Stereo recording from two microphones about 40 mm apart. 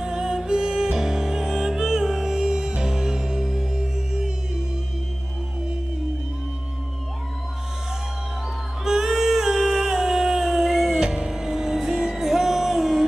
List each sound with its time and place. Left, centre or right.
0.0 s music: centre
8.8 s a sound: centre
11.1 s music: right
11.3 s music: centre